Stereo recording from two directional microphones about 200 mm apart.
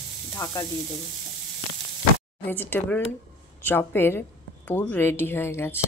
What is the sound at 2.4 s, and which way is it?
Speech, 10° left (ahead or behind).